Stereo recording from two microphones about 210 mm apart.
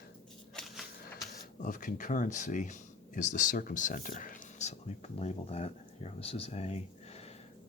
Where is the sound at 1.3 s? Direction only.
40° left (ahead or behind).